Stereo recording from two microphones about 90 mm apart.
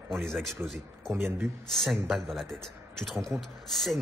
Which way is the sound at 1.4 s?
Centre (ahead or behind).